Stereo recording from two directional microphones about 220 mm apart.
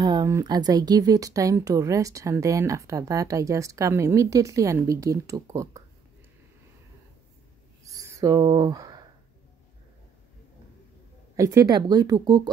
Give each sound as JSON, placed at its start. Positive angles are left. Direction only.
{"t": 0.0, "sound": "speech", "side_deg": -20}
{"t": 7.9, "sound": "a sound", "side_deg": -15}
{"t": 11.3, "sound": "speech", "side_deg": -15}